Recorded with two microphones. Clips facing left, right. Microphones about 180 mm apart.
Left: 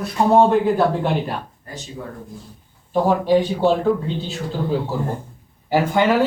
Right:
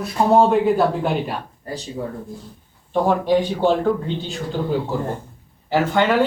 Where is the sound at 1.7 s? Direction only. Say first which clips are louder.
Right 6 dB; 35° right (ahead or behind).